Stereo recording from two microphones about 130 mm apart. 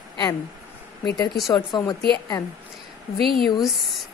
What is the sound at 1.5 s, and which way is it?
Speech, 30° left (ahead or behind).